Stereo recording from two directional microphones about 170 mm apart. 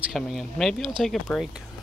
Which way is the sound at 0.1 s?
Centre (ahead or behind).